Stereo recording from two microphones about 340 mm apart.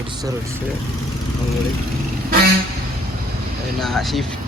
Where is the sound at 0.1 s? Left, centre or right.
Centre.